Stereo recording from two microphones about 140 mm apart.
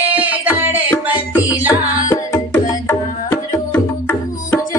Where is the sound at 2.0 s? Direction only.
20° left (ahead or behind).